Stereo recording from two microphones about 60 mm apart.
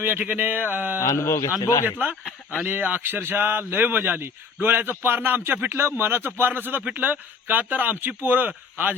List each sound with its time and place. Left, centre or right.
0.0 s speech: right
0.9 s a man's voice: left
2.6 s speech: right